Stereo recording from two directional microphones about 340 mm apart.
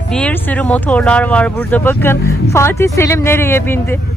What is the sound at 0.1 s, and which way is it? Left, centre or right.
Speech, centre.